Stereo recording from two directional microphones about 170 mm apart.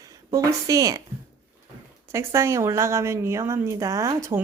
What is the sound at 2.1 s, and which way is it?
A woman's voice, 15° right (ahead or behind).